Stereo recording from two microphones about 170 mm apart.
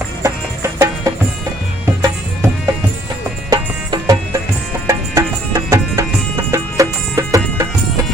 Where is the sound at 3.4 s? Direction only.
20° right (ahead or behind).